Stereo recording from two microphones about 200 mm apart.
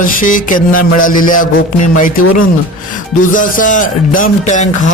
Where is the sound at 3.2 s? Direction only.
40° left (ahead or behind).